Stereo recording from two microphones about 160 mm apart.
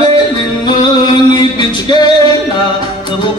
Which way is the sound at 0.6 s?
25° left (ahead or behind).